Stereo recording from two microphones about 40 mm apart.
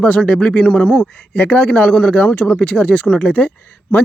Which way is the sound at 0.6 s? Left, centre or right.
Left.